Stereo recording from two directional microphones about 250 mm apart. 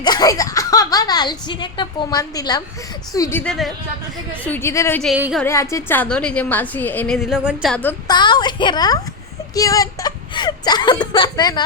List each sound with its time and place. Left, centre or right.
0.0 s a woman's voice: centre
5.1 s music: centre
5.4 s a woman's voice: centre